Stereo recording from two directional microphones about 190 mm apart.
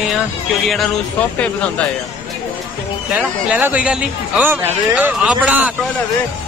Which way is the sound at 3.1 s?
5° right (ahead or behind).